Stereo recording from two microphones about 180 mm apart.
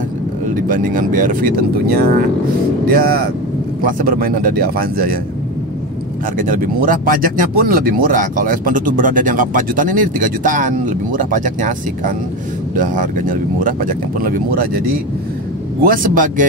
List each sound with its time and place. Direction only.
0.7 s speech: 45° right (ahead or behind)
6.3 s speech: 50° right (ahead or behind)
15.8 s speech: 50° right (ahead or behind)